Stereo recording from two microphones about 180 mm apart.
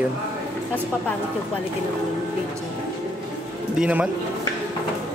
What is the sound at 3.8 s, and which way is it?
Speech, 10° right (ahead or behind).